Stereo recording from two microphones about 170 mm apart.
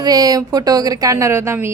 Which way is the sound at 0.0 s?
20° right (ahead or behind).